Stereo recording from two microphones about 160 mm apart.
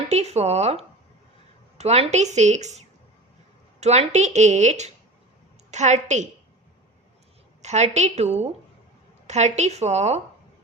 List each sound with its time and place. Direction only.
0.1 s a woman's voice: 40° right (ahead or behind)
7.6 s a woman's voice: 45° right (ahead or behind)